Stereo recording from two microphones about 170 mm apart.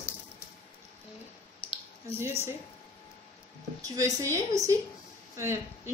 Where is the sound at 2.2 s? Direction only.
15° right (ahead or behind).